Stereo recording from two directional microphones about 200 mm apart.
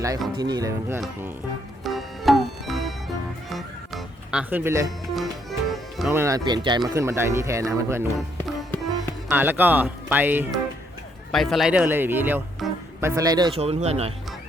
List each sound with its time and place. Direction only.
0.3 s speech: 20° right (ahead or behind)
1.8 s music: centre (ahead or behind)
5.1 s music: centre (ahead or behind)
6.1 s speech: 15° right (ahead or behind)
9.3 s speech: 10° right (ahead or behind)
11.3 s speech: centre (ahead or behind); by 14.1 s 30° right (ahead or behind)